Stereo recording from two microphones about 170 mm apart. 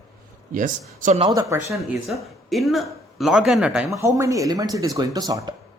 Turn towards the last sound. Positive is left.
turn(degrees=-25)  # may be behind; listen again after turning